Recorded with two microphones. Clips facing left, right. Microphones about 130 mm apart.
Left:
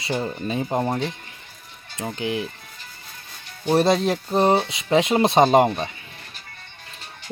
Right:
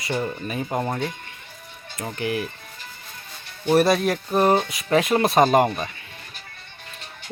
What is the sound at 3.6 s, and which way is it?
Speech, 25° left (ahead or behind).